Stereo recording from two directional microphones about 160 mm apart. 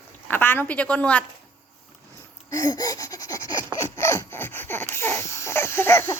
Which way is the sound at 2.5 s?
25° left (ahead or behind).